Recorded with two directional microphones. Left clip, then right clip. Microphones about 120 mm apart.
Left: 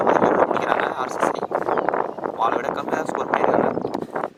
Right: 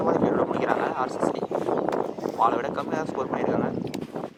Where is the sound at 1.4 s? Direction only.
35° left (ahead or behind).